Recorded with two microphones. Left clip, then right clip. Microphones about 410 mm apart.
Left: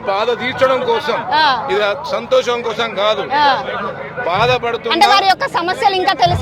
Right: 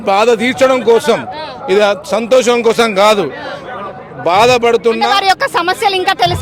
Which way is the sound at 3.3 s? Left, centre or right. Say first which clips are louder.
Left 12 dB; left.